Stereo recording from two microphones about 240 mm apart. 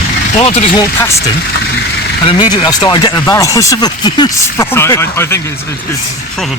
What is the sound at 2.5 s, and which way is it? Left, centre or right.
Speech, centre.